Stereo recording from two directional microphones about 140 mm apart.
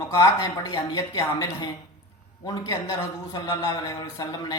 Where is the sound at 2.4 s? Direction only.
20° left (ahead or behind).